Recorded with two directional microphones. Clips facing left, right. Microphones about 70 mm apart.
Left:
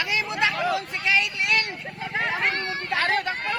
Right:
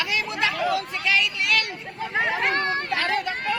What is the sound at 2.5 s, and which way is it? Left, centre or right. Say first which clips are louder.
Speech: right 5 dB; right.